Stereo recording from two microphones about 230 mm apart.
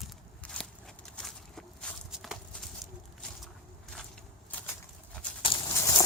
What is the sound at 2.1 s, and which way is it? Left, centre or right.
Clip-clop, centre.